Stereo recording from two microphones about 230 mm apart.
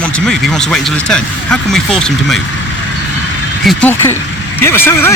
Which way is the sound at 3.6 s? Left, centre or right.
Centre.